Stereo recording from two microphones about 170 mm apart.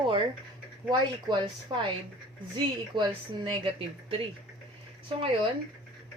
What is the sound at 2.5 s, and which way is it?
Speech, 30° right (ahead or behind).